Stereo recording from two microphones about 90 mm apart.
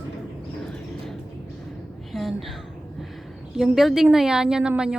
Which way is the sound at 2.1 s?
Centre (ahead or behind).